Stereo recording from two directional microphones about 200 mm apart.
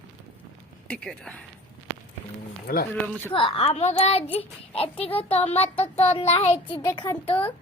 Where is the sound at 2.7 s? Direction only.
55° left (ahead or behind).